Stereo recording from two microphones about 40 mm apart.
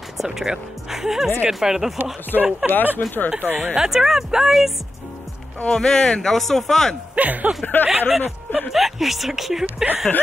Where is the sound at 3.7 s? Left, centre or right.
Centre.